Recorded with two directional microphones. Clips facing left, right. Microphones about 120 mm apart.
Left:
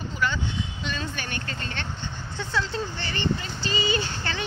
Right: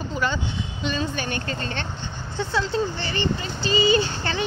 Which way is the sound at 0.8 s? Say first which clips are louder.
Right 11 dB; 25° right (ahead or behind).